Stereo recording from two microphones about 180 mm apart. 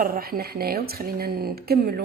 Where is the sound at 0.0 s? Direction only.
55° right (ahead or behind).